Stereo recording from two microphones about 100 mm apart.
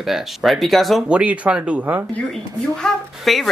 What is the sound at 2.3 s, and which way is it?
Speech, 5° left (ahead or behind).